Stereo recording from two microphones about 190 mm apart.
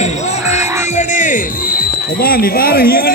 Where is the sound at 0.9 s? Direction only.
40° left (ahead or behind).